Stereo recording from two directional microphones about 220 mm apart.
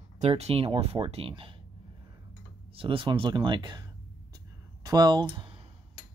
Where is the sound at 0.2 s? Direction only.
30° right (ahead or behind).